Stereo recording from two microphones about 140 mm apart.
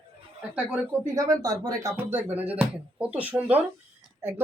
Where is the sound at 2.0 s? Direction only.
15° right (ahead or behind).